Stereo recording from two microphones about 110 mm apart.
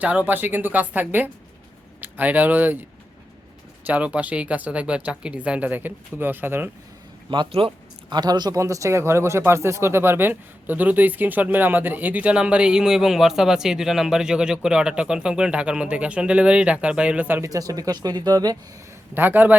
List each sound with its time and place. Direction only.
0.0 s speech: 15° right (ahead or behind)
3.8 s speech: 10° right (ahead or behind)
7.3 s a man's voice: 50° right (ahead or behind)
8.1 s speech: 40° right (ahead or behind); by 17.5 s 15° right (ahead or behind)
17.5 s speech: 30° right (ahead or behind)
19.1 s speech: 15° right (ahead or behind)